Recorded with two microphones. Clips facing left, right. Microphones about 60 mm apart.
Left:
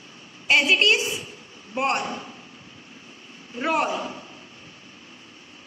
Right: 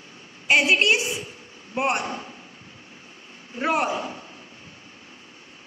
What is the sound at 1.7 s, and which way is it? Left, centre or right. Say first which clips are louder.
Speech: even; centre.